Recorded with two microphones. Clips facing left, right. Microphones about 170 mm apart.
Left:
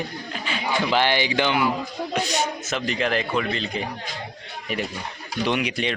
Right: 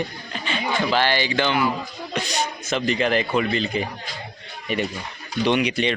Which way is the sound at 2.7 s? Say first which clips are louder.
Right 6 dB; centre (ahead or behind).